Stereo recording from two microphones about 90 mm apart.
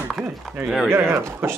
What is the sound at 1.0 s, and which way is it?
Speech, 30° right (ahead or behind).